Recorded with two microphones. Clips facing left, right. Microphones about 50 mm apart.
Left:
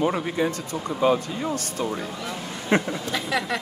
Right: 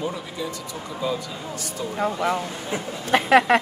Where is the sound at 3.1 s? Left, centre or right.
Right.